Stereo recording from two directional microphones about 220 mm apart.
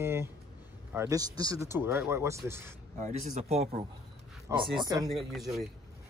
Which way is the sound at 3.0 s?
30° right (ahead or behind).